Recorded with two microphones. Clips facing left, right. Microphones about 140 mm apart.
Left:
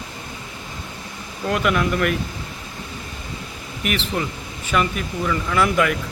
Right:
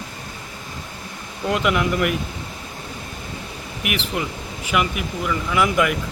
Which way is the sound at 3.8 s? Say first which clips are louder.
Left 1 dB; 10° right (ahead or behind).